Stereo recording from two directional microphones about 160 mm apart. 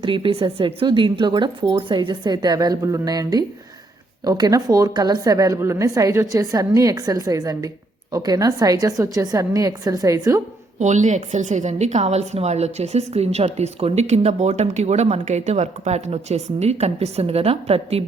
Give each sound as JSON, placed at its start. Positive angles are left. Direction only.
{"t": 0.0, "sound": "a woman's voice", "side_deg": -30}
{"t": 10.8, "sound": "a woman's voice", "side_deg": -50}